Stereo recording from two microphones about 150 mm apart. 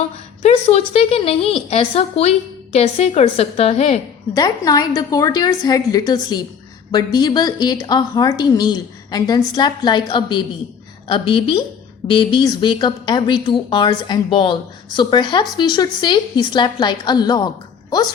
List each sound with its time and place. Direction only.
0.4 s a woman's voice: 45° left (ahead or behind)
4.4 s a woman's voice: 25° left (ahead or behind)